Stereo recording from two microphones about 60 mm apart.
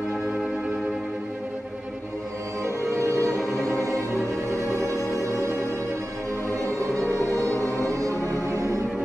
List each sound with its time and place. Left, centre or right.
3.2 s music: left
4.2 s music: right
7.6 s music: left
8.5 s music: right